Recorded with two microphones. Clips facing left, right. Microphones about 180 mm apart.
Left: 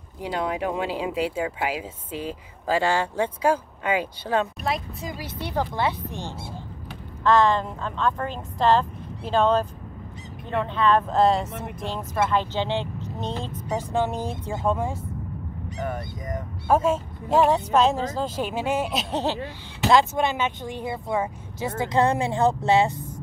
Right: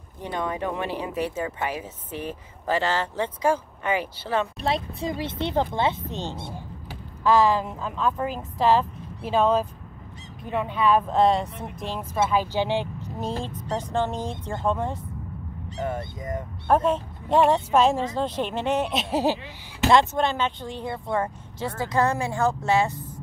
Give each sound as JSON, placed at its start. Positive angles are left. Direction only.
{"t": 0.2, "sound": "speech", "side_deg": 10}
{"t": 4.6, "sound": "speech", "side_deg": -30}
{"t": 7.2, "sound": "speech", "side_deg": -5}
{"t": 13.5, "sound": "speech", "side_deg": 20}
{"t": 13.9, "sound": "speech", "side_deg": 10}
{"t": 15.8, "sound": "speech", "side_deg": -25}
{"t": 16.6, "sound": "speech", "side_deg": 5}
{"t": 19.9, "sound": "speech", "side_deg": 10}
{"t": 21.8, "sound": "speech", "side_deg": 25}